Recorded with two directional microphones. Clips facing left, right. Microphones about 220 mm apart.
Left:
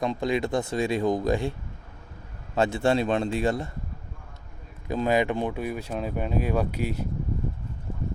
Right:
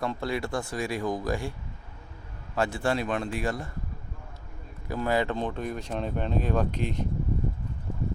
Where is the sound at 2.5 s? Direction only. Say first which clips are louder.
Left 4 dB; 25° left (ahead or behind).